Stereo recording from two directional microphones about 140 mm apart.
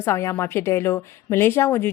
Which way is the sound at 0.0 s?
20° left (ahead or behind).